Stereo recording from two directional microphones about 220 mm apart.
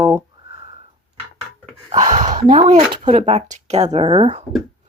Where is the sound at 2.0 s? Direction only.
35° right (ahead or behind).